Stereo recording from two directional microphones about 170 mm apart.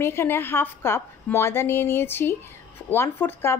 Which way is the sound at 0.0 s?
15° left (ahead or behind).